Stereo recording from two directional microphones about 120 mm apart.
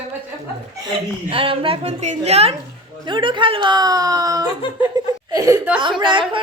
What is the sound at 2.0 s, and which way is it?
Speech, 70° right (ahead or behind).